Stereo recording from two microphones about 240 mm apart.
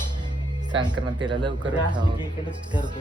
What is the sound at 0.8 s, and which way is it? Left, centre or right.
Speech, centre.